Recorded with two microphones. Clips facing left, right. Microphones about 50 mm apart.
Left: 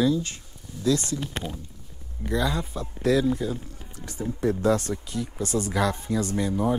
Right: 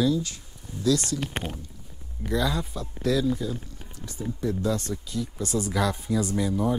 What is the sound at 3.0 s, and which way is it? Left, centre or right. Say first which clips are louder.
Speech: left 2 dB; left.